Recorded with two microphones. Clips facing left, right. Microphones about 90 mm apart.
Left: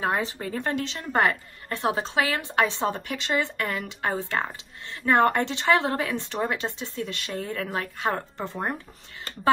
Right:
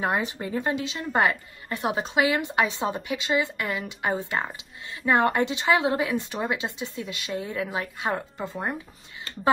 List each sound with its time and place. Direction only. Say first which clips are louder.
0.0 s speech: even; 15° right (ahead or behind)
0.6 s a woman's voice: right 1 dB; 5° right (ahead or behind)
3.8 s a woman's voice: right 1 dB; 20° right (ahead or behind); by 8.5 s 5° right (ahead or behind)